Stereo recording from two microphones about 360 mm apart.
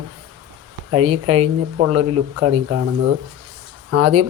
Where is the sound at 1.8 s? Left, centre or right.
Right.